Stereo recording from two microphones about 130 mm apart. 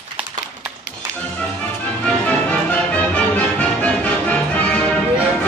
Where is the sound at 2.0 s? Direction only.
10° left (ahead or behind).